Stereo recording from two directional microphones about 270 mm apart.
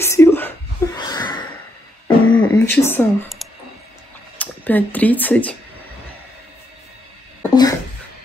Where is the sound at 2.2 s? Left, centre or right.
Centre.